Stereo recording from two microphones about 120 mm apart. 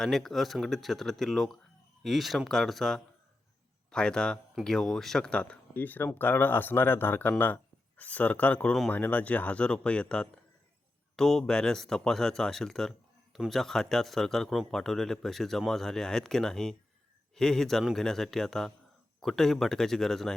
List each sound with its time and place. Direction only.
0.0 s a man's voice: centre (ahead or behind)